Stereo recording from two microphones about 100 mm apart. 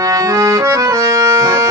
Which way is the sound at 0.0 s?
35° right (ahead or behind).